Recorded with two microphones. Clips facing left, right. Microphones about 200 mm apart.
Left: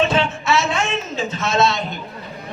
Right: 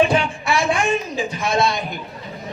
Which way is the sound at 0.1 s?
25° left (ahead or behind).